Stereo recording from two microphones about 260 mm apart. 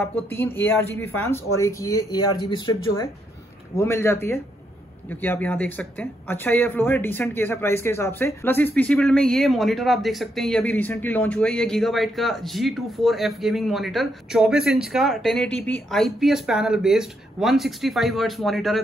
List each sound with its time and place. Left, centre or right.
0.1 s speech: centre